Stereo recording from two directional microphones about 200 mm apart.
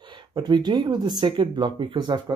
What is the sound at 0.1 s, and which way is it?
Speech, 20° right (ahead or behind).